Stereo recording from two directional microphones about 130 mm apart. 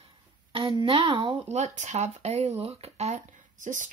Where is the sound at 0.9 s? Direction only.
45° right (ahead or behind).